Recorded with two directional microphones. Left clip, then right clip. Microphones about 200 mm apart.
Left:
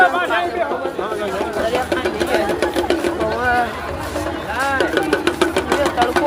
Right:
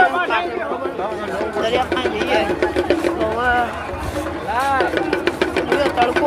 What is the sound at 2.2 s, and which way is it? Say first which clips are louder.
Speech: right 1 dB; 55° left (ahead or behind).